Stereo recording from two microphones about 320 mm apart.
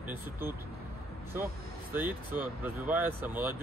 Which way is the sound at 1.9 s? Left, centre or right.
Centre.